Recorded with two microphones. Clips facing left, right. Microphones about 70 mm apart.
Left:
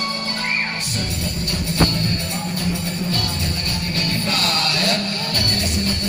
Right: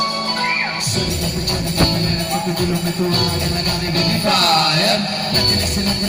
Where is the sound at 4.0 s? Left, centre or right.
Right.